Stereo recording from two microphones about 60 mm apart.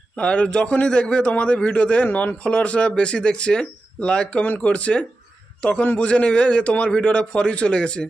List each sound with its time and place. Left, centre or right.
0.2 s a man's voice: centre